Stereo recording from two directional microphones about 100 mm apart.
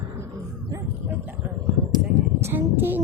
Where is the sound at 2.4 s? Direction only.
20° right (ahead or behind).